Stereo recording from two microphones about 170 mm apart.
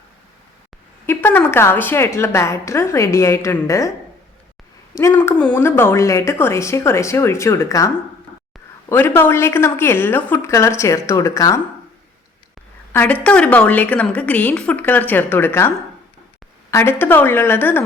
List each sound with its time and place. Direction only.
1.0 s a woman's voice: 10° left (ahead or behind)
4.9 s a woman's voice: 15° left (ahead or behind)
8.9 s a woman's voice: 15° left (ahead or behind)
12.9 s a woman's voice: 10° left (ahead or behind)
16.7 s a woman's voice: 10° left (ahead or behind)